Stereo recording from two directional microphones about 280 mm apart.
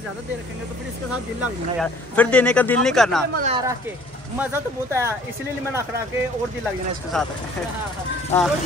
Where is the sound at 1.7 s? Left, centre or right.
Centre.